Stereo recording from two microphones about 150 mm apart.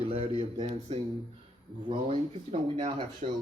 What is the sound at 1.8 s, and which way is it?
Speech, 35° right (ahead or behind).